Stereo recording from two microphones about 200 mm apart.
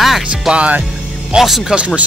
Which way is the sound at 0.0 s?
5° right (ahead or behind).